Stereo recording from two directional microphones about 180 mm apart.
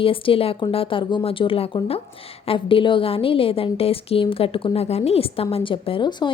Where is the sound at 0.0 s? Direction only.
30° left (ahead or behind).